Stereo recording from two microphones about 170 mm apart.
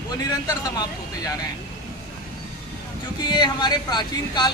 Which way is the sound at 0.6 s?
20° left (ahead or behind).